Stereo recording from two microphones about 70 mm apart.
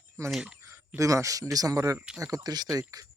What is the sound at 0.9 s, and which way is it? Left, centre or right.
Speech, right.